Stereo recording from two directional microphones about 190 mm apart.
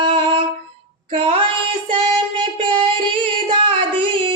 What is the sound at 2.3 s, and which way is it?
Singing, 25° right (ahead or behind).